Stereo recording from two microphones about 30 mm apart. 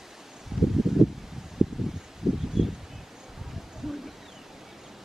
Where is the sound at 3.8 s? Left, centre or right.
Centre.